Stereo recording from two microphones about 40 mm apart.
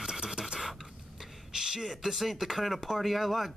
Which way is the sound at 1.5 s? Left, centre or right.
Centre.